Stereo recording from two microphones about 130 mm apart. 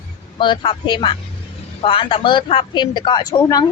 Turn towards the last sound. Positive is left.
turn(degrees=30)  # may be behind; listen again after turning